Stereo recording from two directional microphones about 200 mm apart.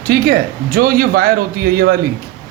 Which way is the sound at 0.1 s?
50° right (ahead or behind).